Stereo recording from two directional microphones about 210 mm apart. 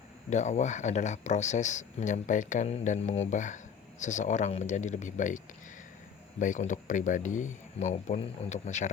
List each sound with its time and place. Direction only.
0.3 s speech: 35° left (ahead or behind)
6.4 s speech: 35° left (ahead or behind)